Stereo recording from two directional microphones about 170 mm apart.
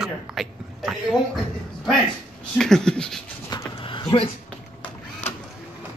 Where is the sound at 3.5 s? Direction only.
25° left (ahead or behind).